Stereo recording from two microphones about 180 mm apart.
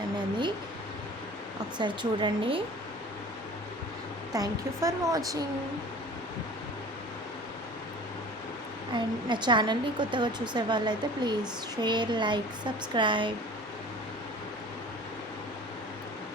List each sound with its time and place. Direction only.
1.8 s a woman's voice: 25° right (ahead or behind)
4.4 s a woman's voice: 20° right (ahead or behind)
8.9 s a woman's voice: 25° right (ahead or behind)